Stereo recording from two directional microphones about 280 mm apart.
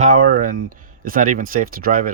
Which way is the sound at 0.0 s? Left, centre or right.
Right.